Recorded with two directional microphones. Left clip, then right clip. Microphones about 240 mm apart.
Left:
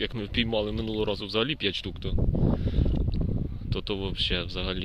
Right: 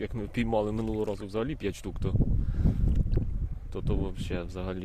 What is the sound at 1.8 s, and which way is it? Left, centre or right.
Speech, right.